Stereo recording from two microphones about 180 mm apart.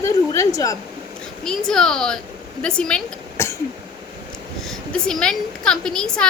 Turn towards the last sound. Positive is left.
turn(degrees=5)  # may be behind; listen again after turning